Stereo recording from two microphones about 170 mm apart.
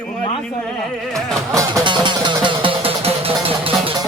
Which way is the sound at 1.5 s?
25° right (ahead or behind).